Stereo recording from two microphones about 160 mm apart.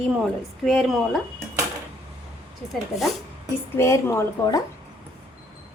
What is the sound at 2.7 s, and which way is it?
Speech, centre (ahead or behind).